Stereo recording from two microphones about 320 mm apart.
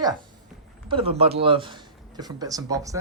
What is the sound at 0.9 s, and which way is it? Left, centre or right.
Speech, centre.